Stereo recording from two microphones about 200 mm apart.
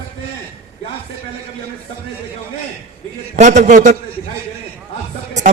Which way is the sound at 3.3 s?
35° right (ahead or behind).